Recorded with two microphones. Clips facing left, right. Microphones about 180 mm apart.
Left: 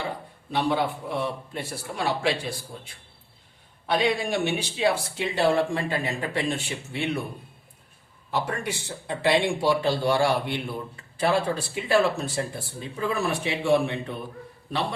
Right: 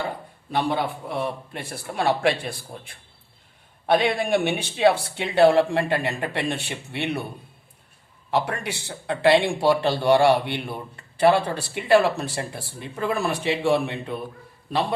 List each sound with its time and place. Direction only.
0.5 s speech: 55° right (ahead or behind)
8.3 s speech: 70° right (ahead or behind)